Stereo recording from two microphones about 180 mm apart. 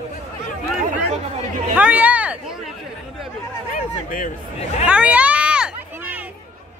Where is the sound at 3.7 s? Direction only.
45° left (ahead or behind).